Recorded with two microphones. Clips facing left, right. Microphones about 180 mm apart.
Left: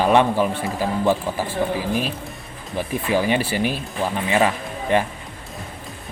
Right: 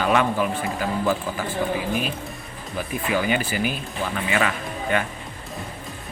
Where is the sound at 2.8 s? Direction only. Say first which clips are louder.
Left 3 dB; 30° left (ahead or behind).